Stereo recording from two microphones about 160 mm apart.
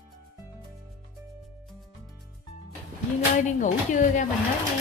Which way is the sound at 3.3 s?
50° left (ahead or behind).